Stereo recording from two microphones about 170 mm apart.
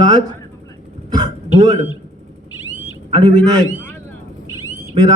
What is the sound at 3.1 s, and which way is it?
Speech, 25° right (ahead or behind).